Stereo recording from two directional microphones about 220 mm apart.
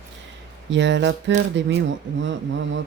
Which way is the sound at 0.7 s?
55° right (ahead or behind).